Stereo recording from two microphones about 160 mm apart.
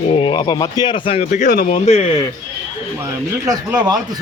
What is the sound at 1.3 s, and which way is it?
Speech, 50° left (ahead or behind).